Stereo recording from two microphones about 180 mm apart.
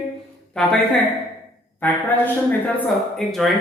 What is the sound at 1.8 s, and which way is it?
A man's voice, 10° left (ahead or behind).